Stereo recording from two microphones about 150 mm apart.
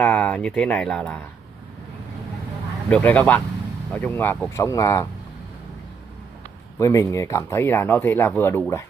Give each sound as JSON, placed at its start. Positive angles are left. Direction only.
{"t": 0.0, "sound": "speech", "side_deg": 5}
{"t": 2.9, "sound": "speech", "side_deg": 10}
{"t": 6.8, "sound": "speech", "side_deg": 20}